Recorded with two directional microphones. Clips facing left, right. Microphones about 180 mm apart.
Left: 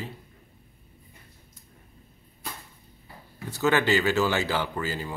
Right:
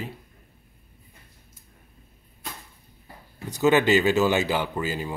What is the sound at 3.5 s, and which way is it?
A man's voice, 15° right (ahead or behind).